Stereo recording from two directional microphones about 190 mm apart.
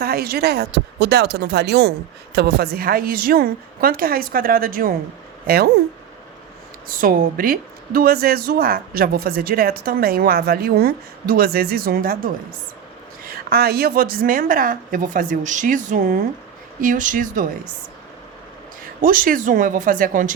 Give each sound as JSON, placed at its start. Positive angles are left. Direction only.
{"t": 0.0, "sound": "speech", "side_deg": -55}
{"t": 6.8, "sound": "speech", "side_deg": -50}
{"t": 19.0, "sound": "speech", "side_deg": -45}